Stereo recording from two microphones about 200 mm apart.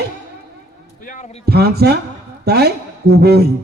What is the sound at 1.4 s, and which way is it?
A man's voice, 55° right (ahead or behind).